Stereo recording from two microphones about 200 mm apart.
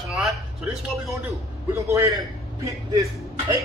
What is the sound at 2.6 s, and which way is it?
Speech, 15° right (ahead or behind).